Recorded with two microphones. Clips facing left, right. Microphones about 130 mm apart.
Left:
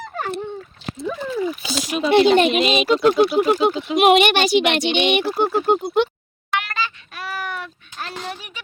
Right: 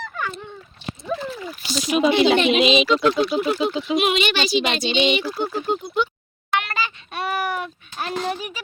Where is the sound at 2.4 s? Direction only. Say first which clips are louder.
Even; 50° left (ahead or behind); by 6.1 s 70° left (ahead or behind).